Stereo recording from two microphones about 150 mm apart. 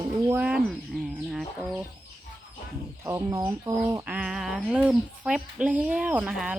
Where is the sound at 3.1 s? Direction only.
20° right (ahead or behind).